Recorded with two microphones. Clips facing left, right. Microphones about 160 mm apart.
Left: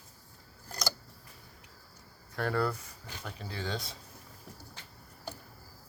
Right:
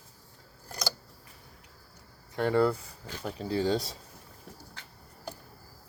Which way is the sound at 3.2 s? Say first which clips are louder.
Right 11 dB; 35° right (ahead or behind).